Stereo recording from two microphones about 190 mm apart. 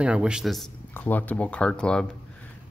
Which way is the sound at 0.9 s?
10° left (ahead or behind).